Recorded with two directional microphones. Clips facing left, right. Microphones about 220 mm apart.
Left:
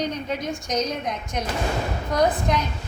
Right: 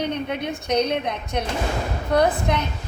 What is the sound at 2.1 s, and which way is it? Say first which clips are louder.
Speech: right 2 dB; 60° right (ahead or behind).